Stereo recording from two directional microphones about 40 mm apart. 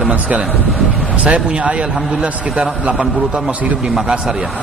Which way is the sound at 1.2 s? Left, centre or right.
Right.